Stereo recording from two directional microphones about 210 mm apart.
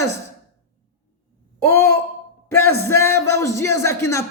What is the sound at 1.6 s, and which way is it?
Speech, 10° left (ahead or behind).